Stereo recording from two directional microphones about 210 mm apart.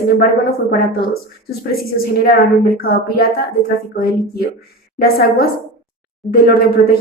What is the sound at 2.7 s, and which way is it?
Speech, 45° left (ahead or behind).